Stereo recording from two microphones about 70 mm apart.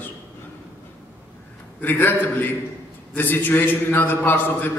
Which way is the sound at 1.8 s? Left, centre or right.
Left.